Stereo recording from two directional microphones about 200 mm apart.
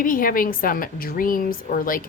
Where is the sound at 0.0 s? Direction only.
45° left (ahead or behind).